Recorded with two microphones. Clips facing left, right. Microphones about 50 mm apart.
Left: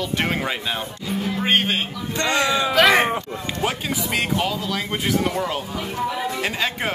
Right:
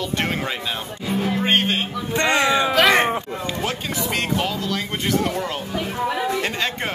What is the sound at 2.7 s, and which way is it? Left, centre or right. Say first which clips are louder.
Speech: left 4 dB; centre.